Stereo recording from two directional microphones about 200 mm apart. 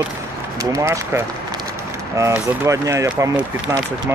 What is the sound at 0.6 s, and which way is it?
Speech, 15° right (ahead or behind).